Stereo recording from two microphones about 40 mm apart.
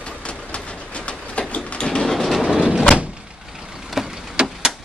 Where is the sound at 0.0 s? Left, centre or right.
Left.